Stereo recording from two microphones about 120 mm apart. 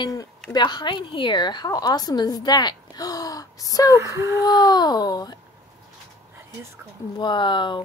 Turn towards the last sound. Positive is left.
turn(degrees=40)  # may be behind; listen again after turning